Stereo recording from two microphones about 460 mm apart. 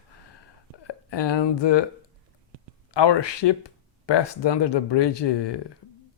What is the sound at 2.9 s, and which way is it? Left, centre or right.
Speech, left.